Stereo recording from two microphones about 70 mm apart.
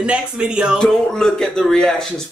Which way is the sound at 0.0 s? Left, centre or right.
Centre.